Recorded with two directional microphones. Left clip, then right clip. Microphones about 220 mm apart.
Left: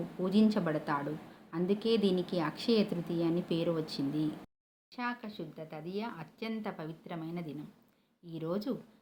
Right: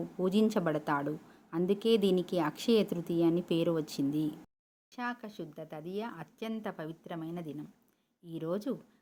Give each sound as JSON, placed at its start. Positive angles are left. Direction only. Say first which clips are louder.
{"t": 0.2, "sound": "a woman's voice", "louder": "right 1 dB", "side_deg": -50}
{"t": 4.9, "sound": "speech", "louder": "even", "side_deg": -40}